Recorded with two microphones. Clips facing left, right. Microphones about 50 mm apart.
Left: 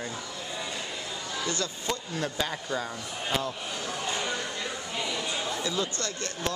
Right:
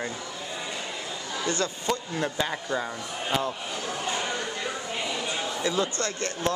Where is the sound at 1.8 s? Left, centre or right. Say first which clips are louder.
Right 3 dB; centre.